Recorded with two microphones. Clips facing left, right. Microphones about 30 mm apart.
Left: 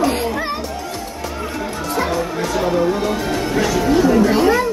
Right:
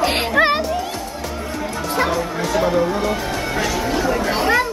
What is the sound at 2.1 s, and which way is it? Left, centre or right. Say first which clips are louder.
Speech: even; centre.